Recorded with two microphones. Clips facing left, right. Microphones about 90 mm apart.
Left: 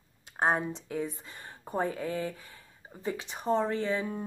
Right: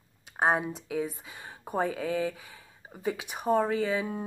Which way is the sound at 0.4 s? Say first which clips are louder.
Right 2 dB; 5° right (ahead or behind).